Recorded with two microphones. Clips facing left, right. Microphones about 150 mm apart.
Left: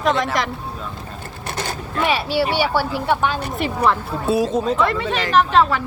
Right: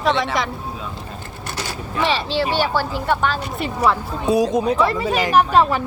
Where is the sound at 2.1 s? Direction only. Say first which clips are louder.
Left 2 dB; 10° left (ahead or behind).